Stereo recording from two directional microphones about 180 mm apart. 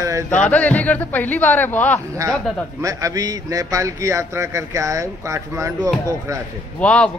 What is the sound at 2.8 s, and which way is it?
A man's voice, 20° right (ahead or behind).